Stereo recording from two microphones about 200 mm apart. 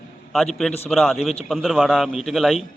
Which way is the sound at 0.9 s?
Centre (ahead or behind).